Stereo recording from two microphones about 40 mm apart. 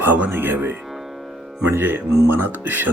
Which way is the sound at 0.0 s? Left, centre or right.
Right.